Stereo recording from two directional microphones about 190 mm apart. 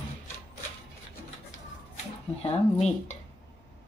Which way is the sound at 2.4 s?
35° left (ahead or behind).